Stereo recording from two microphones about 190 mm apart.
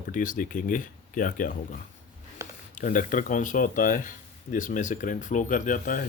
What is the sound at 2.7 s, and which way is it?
Speech, 45° left (ahead or behind).